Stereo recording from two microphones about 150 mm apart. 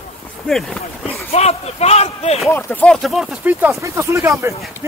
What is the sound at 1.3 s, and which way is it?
Speech, 45° left (ahead or behind).